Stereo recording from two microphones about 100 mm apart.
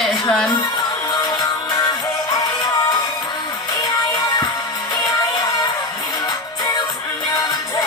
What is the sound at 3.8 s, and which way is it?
Music, 40° left (ahead or behind).